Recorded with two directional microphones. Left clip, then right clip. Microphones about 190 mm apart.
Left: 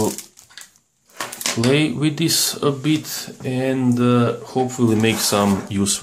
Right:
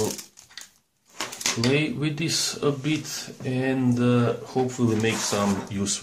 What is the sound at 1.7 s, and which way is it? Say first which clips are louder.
Speech: left 9 dB; 25° left (ahead or behind).